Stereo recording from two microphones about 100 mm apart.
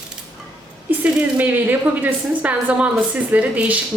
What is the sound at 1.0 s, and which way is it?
A woman's voice, 15° right (ahead or behind).